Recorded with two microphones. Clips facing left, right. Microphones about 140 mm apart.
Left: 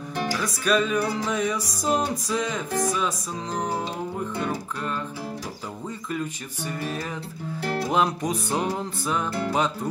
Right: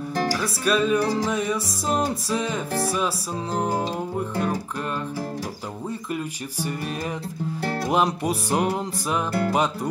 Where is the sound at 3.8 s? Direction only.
40° right (ahead or behind).